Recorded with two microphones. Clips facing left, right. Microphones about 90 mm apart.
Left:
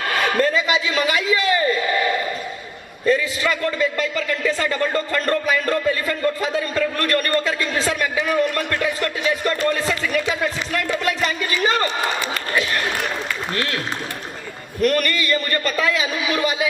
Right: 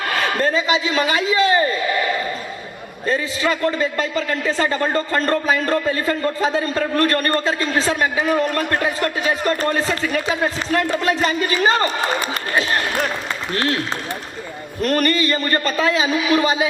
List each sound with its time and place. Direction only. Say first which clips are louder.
0.4 s a man's voice: right 1 dB; 35° right (ahead or behind)
3.1 s a man's voice: left 1 dB; 35° right (ahead or behind)
14.8 s a man's voice: right 1 dB; 35° right (ahead or behind)